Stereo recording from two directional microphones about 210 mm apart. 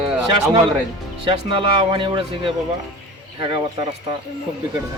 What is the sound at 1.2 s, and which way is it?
Speech, 25° right (ahead or behind).